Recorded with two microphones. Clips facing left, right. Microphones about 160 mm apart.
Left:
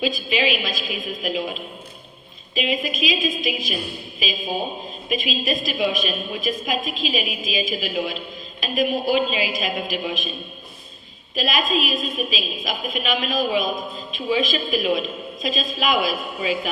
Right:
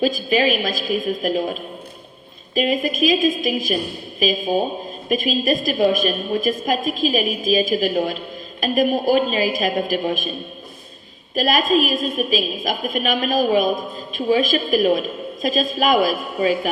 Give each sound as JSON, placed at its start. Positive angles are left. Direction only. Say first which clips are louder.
{"t": 0.0, "sound": "a woman's voice", "louder": "right 5 dB", "side_deg": -45}
{"t": 11.3, "sound": "a woman's voice", "louder": "right 5 dB", "side_deg": -45}